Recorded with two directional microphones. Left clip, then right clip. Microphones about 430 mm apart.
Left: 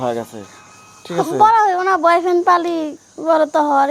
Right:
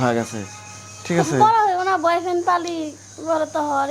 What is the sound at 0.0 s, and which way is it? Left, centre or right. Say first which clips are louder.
Speech: even; centre.